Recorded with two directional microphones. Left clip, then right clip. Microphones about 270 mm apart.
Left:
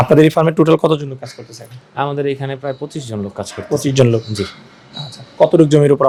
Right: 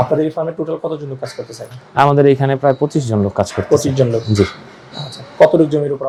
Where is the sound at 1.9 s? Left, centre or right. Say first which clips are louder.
Right 8 dB; right.